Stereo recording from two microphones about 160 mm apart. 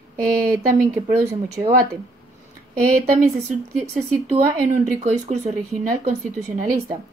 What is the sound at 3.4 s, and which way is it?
Speech, 45° right (ahead or behind).